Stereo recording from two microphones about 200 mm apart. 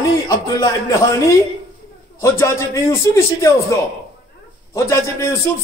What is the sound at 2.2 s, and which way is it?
A man's voice, 15° left (ahead or behind).